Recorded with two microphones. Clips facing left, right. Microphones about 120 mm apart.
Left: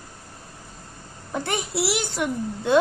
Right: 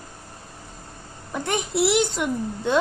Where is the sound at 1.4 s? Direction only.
20° right (ahead or behind).